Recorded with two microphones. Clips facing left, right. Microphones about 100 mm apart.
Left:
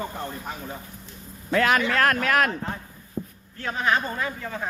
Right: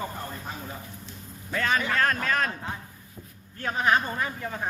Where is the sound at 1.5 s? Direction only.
70° left (ahead or behind).